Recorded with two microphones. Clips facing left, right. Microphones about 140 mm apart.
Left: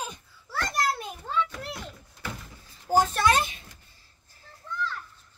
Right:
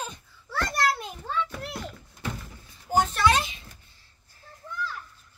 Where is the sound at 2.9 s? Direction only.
45° left (ahead or behind).